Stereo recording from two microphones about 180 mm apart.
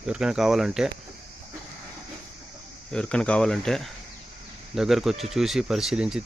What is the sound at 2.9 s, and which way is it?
Speech, 5° left (ahead or behind).